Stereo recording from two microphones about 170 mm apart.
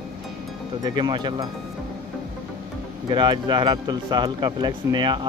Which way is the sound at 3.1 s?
25° right (ahead or behind).